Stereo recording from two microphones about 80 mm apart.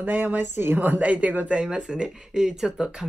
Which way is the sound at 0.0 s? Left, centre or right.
Right.